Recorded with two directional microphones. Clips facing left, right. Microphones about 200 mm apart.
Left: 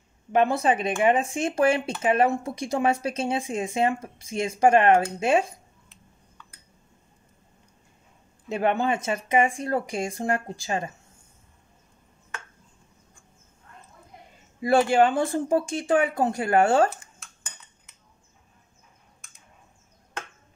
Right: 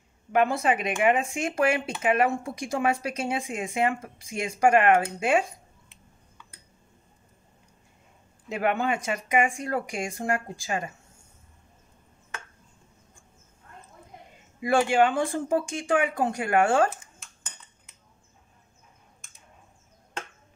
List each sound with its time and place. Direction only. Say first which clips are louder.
0.3 s speech: left 2 dB; 30° left (ahead or behind)
8.5 s speech: left 2 dB; 30° left (ahead or behind)
14.6 s speech: left 2 dB; 35° left (ahead or behind)